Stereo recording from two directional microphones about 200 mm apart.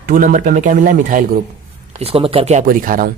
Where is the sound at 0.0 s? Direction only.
40° right (ahead or behind).